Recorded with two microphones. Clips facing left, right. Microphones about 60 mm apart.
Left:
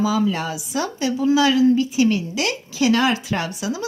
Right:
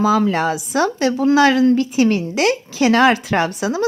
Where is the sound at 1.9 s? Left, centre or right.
Right.